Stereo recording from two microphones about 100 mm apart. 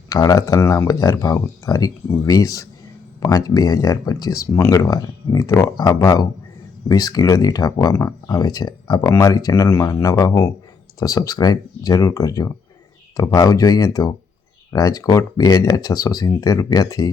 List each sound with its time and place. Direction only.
0.1 s speech: 35° left (ahead or behind)